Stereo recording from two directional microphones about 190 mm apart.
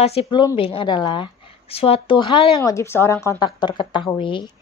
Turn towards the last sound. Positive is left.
turn(degrees=25)  # may be behind; listen again after turning